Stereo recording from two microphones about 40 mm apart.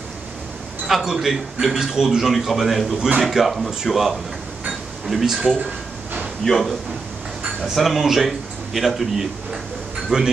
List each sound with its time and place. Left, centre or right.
0.8 s a man's voice: centre
6.4 s a man's voice: centre
10.1 s speech: right